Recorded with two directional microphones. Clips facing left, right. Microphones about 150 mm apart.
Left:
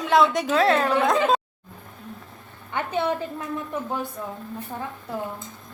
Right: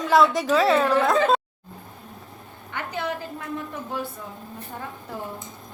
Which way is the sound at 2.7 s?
25° left (ahead or behind).